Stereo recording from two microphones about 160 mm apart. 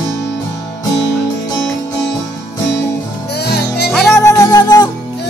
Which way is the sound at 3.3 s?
90° left.